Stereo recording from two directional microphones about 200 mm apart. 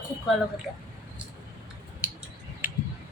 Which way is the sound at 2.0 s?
5° right (ahead or behind).